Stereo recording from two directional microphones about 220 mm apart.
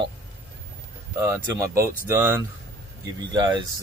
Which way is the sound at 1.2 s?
15° right (ahead or behind).